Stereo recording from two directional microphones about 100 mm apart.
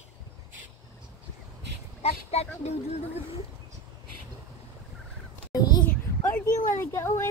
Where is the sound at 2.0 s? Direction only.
90° left.